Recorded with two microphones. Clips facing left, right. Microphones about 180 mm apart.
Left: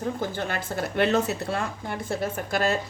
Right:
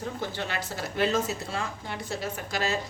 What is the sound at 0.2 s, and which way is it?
A woman's voice, 50° left (ahead or behind).